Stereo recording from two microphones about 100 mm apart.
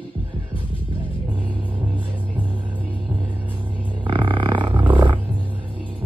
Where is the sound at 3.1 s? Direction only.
15° right (ahead or behind).